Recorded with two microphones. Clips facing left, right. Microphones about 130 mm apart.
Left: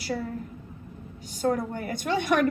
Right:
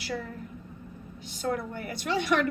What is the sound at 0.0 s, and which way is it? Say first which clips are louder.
Speech: left 4 dB; 40° left (ahead or behind).